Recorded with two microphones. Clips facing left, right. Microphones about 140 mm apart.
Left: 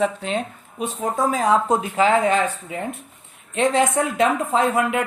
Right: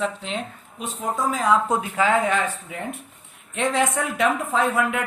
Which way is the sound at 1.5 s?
25° left (ahead or behind).